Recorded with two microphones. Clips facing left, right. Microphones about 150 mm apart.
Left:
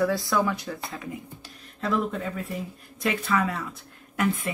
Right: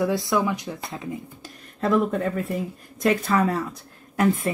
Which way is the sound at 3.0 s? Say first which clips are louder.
Right 5 dB; 40° right (ahead or behind).